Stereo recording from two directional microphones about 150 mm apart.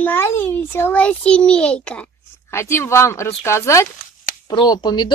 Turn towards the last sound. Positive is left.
turn(degrees=30)  # may be behind; listen again after turning